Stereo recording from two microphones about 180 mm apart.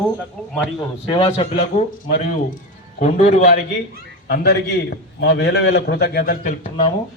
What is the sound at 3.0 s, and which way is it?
Speech, 45° left (ahead or behind).